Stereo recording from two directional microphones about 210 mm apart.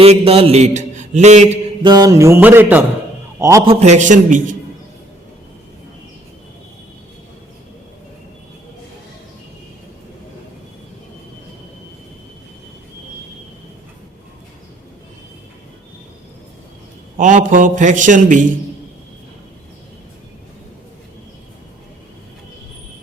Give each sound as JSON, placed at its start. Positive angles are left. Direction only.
{"t": 0.0, "sound": "a man's voice", "side_deg": -30}
{"t": 1.8, "sound": "speech", "side_deg": -20}
{"t": 3.7, "sound": "a man's voice", "side_deg": -30}
{"t": 17.2, "sound": "a man's voice", "side_deg": -35}